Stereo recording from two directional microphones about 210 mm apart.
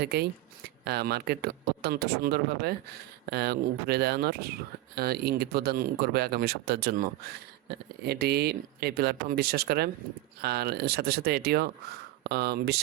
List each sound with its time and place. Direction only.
0.0 s speech: 50° right (ahead or behind)
8.0 s speech: 50° right (ahead or behind)